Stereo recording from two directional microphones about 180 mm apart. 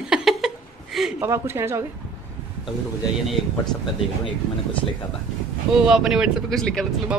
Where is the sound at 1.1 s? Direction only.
15° right (ahead or behind).